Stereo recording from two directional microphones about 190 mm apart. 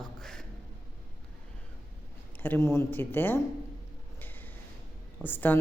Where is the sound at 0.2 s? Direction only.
Centre (ahead or behind).